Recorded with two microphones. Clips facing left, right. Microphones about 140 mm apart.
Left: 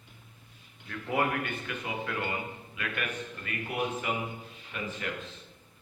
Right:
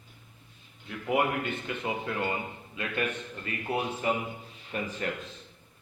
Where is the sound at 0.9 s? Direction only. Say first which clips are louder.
Right 2 dB; 20° right (ahead or behind); by 4.9 s 40° right (ahead or behind).